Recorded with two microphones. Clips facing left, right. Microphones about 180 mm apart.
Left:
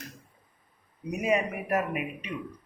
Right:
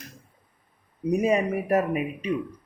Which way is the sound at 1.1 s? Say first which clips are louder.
Right 5 dB; 35° right (ahead or behind).